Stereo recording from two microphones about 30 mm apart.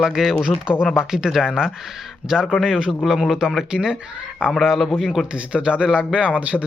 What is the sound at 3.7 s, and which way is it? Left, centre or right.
Speech, right.